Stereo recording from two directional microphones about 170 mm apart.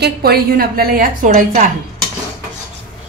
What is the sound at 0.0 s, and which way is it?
A woman's voice, 65° right (ahead or behind).